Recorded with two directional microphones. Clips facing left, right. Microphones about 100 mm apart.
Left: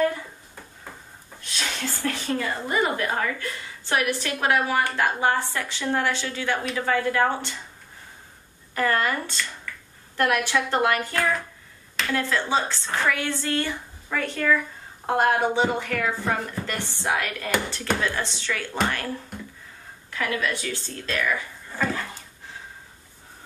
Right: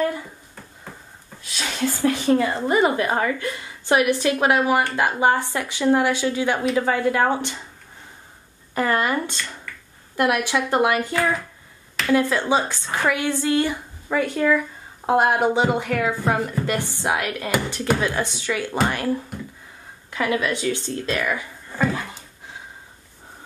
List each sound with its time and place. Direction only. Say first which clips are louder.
1.4 s speech: right 5 dB; 5° right (ahead or behind)
2.0 s a woman's voice: right 9 dB; 20° right (ahead or behind)
8.7 s a woman's voice: right 2 dB; 20° right (ahead or behind)
11.1 s speech: right 3 dB; centre (ahead or behind)
12.1 s a woman's voice: right 6 dB; 15° right (ahead or behind)
20.1 s a woman's voice: right 4 dB; 20° right (ahead or behind)